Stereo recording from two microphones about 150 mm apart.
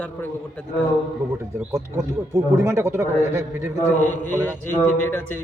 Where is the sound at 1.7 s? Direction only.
20° right (ahead or behind).